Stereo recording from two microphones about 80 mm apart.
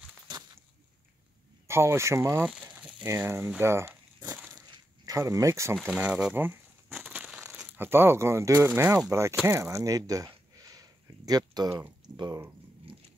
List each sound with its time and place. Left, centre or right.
1.7 s speech: right
2.4 s a sound: centre
3.3 s speech: right
4.6 s a sound: right
5.9 s speech: centre
6.3 s speech: right
7.0 s crumpling: right
7.7 s speech: right
8.9 s speech: right
9.5 s a sound: right
12.1 s speech: right